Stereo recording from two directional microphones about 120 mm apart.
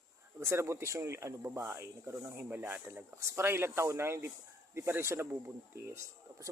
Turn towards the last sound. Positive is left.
turn(degrees=-20)  # may be behind; listen again after turning